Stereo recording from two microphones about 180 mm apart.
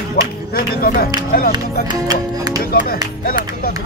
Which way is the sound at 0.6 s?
50° left (ahead or behind).